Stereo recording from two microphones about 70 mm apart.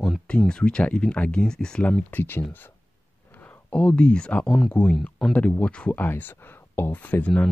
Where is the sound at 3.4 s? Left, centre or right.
Centre.